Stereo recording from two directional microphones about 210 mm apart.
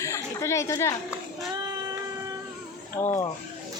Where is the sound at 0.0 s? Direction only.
15° left (ahead or behind).